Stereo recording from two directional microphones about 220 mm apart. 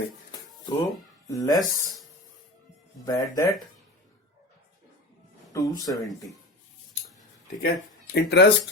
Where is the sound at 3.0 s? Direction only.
15° left (ahead or behind).